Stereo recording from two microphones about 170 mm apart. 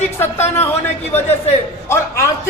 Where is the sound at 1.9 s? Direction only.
15° left (ahead or behind).